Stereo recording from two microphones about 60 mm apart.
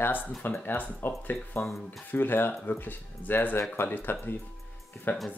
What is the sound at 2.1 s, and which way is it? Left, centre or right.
Speech, left.